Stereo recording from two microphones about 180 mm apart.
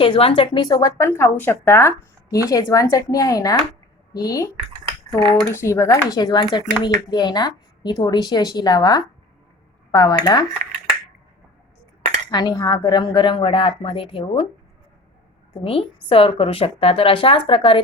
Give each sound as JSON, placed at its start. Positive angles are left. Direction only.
{"t": 0.0, "sound": "speech", "side_deg": 30}
{"t": 12.3, "sound": "speech", "side_deg": 25}
{"t": 16.0, "sound": "speech", "side_deg": 30}